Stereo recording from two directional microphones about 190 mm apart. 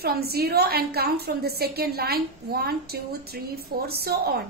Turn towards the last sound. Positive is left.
turn(degrees=-55)  # may be behind; listen again after turning